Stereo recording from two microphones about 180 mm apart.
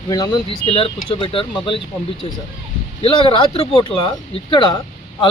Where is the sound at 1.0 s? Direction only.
30° left (ahead or behind).